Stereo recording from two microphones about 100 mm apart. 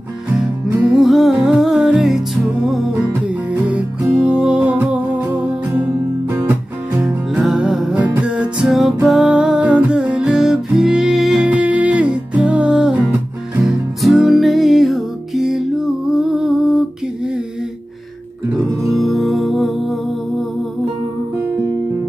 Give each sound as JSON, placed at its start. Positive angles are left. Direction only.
{"t": 0.8, "sound": "music", "side_deg": 0}
{"t": 6.3, "sound": "music", "side_deg": -30}
{"t": 7.3, "sound": "music", "side_deg": -5}
{"t": 18.9, "sound": "music", "side_deg": 0}